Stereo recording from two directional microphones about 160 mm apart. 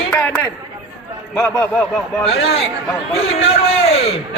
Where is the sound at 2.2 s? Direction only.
40° left (ahead or behind).